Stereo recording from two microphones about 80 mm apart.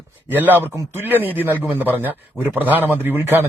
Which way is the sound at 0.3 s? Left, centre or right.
Right.